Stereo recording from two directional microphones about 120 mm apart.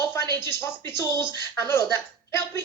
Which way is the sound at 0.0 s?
20° left (ahead or behind).